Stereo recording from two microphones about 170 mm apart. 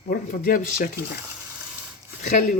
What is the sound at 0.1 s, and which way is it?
Speech, 55° left (ahead or behind).